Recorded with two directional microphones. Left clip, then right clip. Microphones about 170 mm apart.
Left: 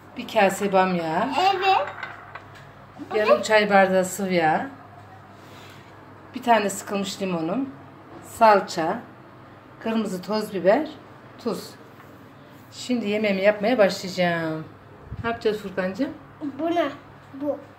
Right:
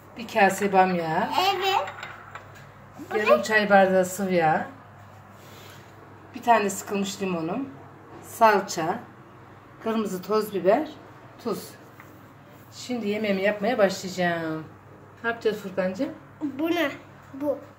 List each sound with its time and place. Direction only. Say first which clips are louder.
0.1 s speech: left 1 dB; 5° left (ahead or behind)
3.1 s speech: left 2 dB; centre (ahead or behind)
6.3 s a woman's voice: left 1 dB; 5° left (ahead or behind)
12.7 s speech: left 3 dB; 5° left (ahead or behind)
16.5 s a child's voice: left 2 dB; 15° right (ahead or behind)